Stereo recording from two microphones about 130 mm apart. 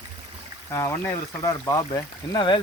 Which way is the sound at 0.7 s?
20° left (ahead or behind).